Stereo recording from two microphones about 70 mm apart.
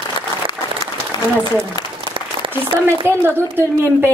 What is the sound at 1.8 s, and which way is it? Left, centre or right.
Applause, left.